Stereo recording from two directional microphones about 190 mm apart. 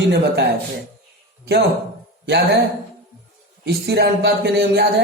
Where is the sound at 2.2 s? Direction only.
60° right (ahead or behind).